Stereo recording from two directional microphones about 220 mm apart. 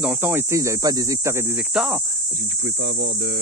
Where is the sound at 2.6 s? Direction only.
55° right (ahead or behind).